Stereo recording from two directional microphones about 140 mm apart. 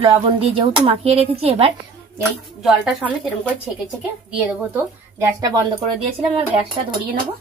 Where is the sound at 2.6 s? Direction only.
Centre (ahead or behind).